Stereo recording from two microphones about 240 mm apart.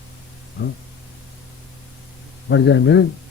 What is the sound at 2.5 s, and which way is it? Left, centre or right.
Speech, left.